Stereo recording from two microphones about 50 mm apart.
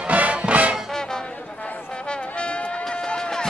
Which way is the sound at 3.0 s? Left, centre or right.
Centre.